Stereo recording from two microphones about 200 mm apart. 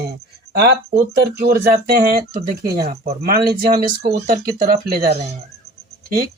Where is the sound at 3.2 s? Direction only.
50° right (ahead or behind).